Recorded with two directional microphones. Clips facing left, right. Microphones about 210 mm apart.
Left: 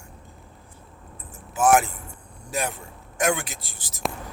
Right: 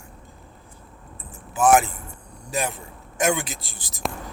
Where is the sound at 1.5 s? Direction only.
Centre (ahead or behind).